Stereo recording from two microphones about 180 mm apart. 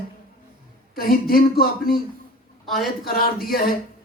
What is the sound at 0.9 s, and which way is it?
Speech, 55° left (ahead or behind).